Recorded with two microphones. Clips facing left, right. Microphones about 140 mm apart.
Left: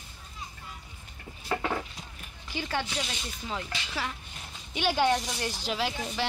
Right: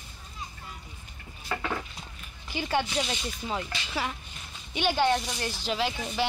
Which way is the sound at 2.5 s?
15° right (ahead or behind).